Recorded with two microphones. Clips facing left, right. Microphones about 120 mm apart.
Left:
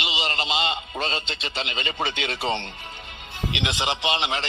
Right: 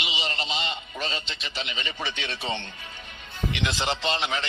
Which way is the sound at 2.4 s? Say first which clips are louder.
Left 6 dB; 30° left (ahead or behind).